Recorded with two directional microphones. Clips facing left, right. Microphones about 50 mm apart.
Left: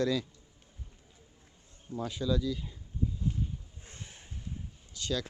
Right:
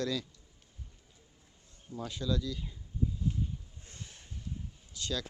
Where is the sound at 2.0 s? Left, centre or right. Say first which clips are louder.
Left 3 dB; centre.